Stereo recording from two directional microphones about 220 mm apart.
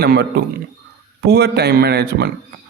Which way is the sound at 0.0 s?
45° right (ahead or behind).